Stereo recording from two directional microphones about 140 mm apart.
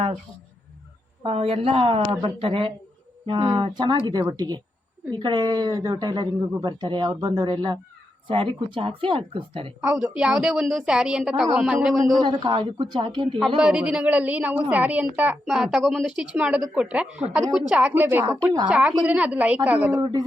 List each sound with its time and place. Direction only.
1.2 s speech: 40° right (ahead or behind)
9.8 s a woman's voice: 5° right (ahead or behind)
12.1 s speech: 30° right (ahead or behind)
13.6 s a woman's voice: 5° right (ahead or behind)
15.4 s a woman's voice: centre (ahead or behind)
20.0 s speech: 30° right (ahead or behind)